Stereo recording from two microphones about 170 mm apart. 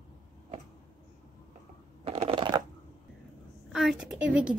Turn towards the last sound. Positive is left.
turn(degrees=-5)  # may be behind; listen again after turning